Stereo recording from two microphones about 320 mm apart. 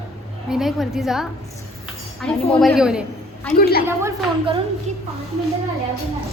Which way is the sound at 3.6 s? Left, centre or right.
Left.